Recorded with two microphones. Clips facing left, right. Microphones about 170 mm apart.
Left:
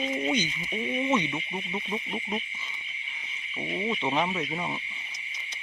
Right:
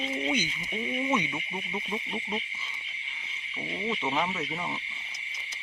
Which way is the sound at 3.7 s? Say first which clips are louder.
Left 2 dB; 15° left (ahead or behind).